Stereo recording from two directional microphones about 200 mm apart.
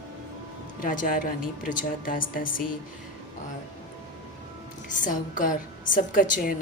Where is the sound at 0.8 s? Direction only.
45° left (ahead or behind).